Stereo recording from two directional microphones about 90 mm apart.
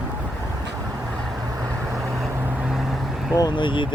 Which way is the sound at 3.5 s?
65° left (ahead or behind).